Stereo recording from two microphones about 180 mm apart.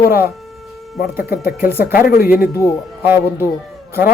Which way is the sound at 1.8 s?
50° left (ahead or behind).